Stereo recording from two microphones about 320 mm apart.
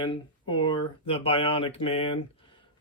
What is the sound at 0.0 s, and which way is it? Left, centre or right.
Speech, centre.